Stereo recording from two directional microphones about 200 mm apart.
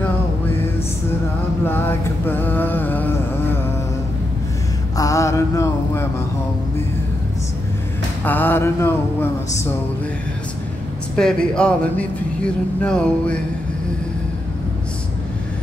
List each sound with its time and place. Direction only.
1.7 s a sound: 10° left (ahead or behind)
4.9 s mantra: 15° left (ahead or behind)
8.2 s music: 10° left (ahead or behind)
11.1 s speech: 5° left (ahead or behind)